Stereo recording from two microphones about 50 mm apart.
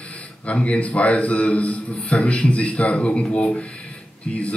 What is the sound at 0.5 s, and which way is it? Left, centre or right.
A man's voice, left.